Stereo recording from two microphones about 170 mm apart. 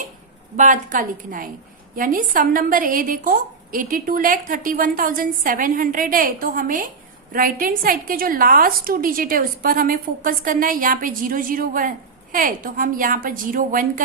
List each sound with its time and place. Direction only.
0.5 s a woman's voice: 50° right (ahead or behind)